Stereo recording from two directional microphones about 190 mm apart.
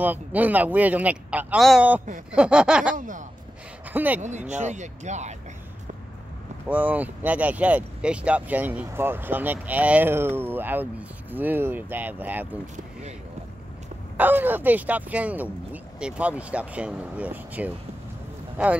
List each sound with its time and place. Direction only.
0.0 s speech: 10° right (ahead or behind)
2.3 s a sound: 5° right (ahead or behind)
3.0 s speech: 45° right (ahead or behind)
3.9 s speech: 10° right (ahead or behind)
4.2 s speech: 40° right (ahead or behind)
6.7 s speech: 10° right (ahead or behind)
14.1 s speech: 10° right (ahead or behind)